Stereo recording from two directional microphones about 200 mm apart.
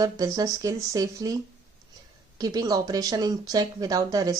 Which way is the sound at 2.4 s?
20° right (ahead or behind).